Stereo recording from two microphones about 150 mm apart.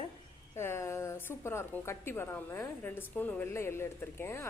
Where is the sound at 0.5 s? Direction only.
15° left (ahead or behind).